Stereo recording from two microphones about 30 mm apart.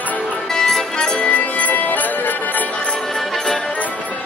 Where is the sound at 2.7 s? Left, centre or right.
Left.